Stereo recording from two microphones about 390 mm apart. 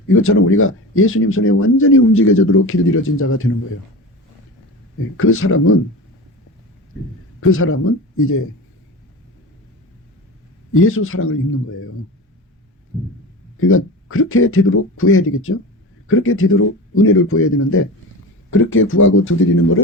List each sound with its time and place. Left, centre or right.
0.1 s speech: left
5.1 s speech: left
7.5 s speech: left
10.8 s speech: left
13.6 s speech: left